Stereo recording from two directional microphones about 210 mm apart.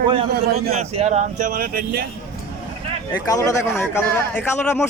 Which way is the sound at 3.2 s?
15° left (ahead or behind).